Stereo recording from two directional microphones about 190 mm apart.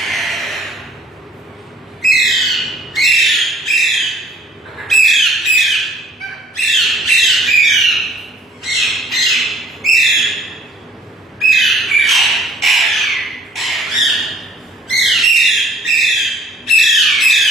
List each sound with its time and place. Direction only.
0.0 s a sound: centre (ahead or behind)
2.0 s squawk: centre (ahead or behind)
4.9 s bird: centre (ahead or behind)
8.6 s squawk: centre (ahead or behind)
14.8 s bird: centre (ahead or behind)